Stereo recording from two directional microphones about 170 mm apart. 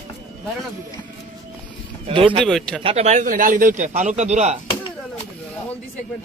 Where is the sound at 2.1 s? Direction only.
30° right (ahead or behind).